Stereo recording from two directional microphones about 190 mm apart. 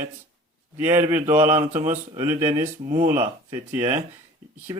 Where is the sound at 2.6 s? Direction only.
35° right (ahead or behind).